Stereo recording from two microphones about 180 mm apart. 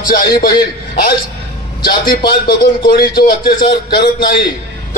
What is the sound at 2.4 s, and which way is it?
Speech, 55° left (ahead or behind).